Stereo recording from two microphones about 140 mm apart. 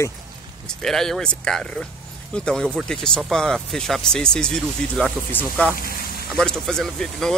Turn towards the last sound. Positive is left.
turn(degrees=5)  # may be behind; listen again after turning